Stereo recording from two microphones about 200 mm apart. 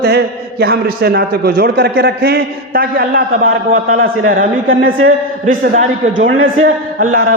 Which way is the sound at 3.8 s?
90° right.